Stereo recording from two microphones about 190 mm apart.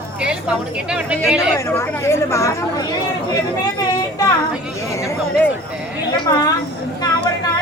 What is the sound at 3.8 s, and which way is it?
Child singing, 20° left (ahead or behind).